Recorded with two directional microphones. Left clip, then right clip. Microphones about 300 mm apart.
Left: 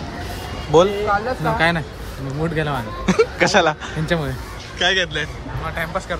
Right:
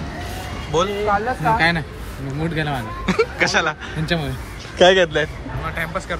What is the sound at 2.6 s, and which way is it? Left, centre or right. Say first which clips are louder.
Speech: even; centre.